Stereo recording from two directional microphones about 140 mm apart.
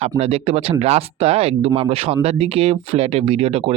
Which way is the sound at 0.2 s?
45° right (ahead or behind).